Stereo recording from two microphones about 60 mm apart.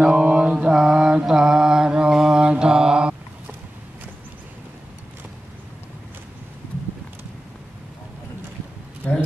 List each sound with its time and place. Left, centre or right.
0.0 s mantra: centre